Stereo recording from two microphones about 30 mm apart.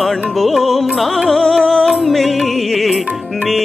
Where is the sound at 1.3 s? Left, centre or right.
Centre.